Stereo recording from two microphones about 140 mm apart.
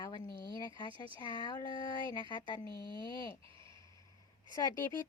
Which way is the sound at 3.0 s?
35° right (ahead or behind).